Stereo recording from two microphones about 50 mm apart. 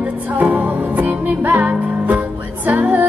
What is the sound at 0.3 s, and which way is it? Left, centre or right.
Music, right.